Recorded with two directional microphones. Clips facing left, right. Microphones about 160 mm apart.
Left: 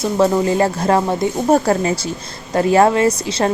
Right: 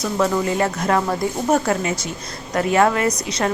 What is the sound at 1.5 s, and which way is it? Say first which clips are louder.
A woman's voice: left 4 dB; 35° left (ahead or behind).